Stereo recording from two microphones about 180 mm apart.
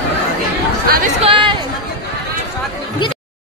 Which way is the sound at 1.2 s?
30° right (ahead or behind).